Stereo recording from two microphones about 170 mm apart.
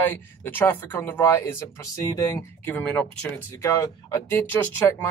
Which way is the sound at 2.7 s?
5° left (ahead or behind).